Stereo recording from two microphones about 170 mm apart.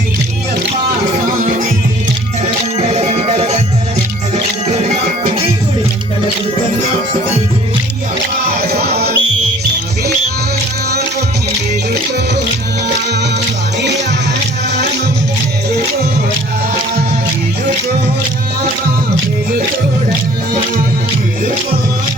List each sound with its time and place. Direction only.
2.7 s music: 40° right (ahead or behind)
8.5 s music: 65° right (ahead or behind)